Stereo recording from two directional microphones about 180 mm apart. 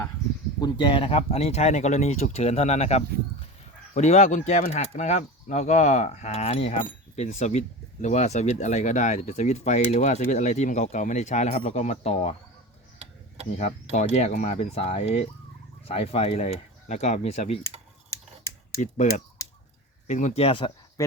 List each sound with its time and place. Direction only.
0.6 s speech: 25° left (ahead or behind)
13.0 s tick-tock: 35° right (ahead or behind)
13.9 s speech: 40° left (ahead or behind)
20.1 s speech: 40° left (ahead or behind)